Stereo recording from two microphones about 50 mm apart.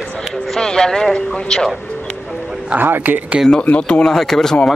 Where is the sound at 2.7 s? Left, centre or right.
Right.